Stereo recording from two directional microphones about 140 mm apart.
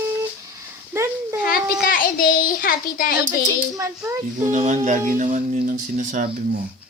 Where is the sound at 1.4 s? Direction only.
90° left.